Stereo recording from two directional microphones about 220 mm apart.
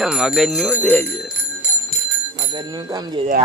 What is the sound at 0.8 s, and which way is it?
Speech, 5° left (ahead or behind).